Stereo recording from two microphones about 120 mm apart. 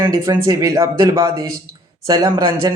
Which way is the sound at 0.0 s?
30° right (ahead or behind).